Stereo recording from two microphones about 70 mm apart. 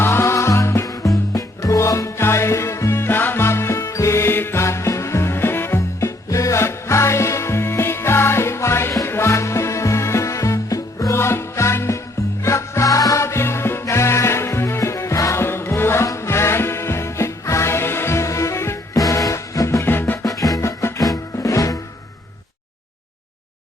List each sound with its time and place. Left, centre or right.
0.0 s music: left
3.8 s music: left
11.2 s music: left
13.2 s music: left
18.9 s music: left
19.8 s music: left
20.3 s music: left